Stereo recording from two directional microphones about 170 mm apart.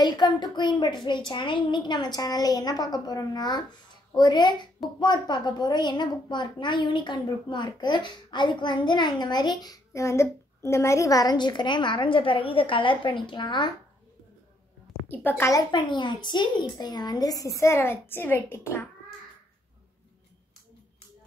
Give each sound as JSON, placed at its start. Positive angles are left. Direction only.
{"t": 0.0, "sound": "a woman's voice", "side_deg": 25}
{"t": 15.0, "sound": "a woman's voice", "side_deg": 10}